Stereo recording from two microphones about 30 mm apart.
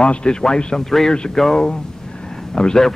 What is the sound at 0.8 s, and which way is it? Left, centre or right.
A man's voice, centre.